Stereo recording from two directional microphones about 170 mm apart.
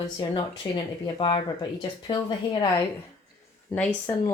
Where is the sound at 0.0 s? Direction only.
30° left (ahead or behind).